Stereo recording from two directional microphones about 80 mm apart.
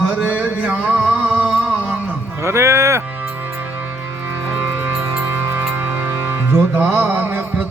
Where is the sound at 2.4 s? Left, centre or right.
Right.